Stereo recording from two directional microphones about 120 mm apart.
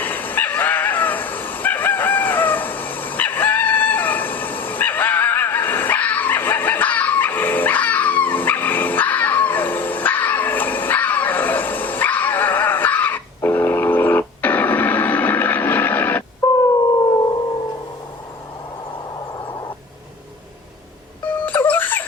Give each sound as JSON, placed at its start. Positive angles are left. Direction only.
{"t": 0.0, "sound": "dog", "side_deg": 15}
{"t": 16.4, "sound": "a sound", "side_deg": 25}
{"t": 21.2, "sound": "wail", "side_deg": 15}